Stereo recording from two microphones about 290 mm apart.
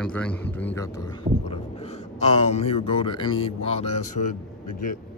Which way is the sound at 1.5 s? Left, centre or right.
Left.